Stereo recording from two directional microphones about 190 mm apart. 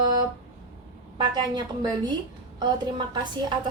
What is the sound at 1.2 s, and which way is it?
Speech, 25° right (ahead or behind).